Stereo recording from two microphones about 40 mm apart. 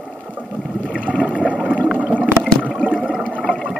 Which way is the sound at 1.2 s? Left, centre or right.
Right.